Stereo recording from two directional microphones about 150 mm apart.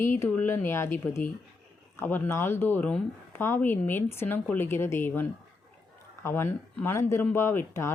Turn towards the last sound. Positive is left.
turn(degrees=15)  # may be behind; listen again after turning